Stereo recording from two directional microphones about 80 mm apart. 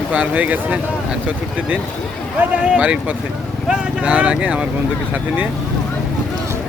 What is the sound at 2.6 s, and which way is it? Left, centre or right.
Speech, centre.